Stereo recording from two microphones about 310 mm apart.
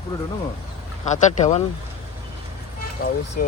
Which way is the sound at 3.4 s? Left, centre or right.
Left.